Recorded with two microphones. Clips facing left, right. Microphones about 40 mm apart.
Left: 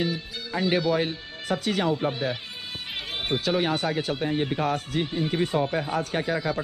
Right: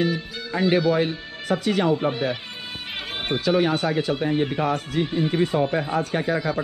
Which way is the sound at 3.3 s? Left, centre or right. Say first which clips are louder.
Right 4 dB; right.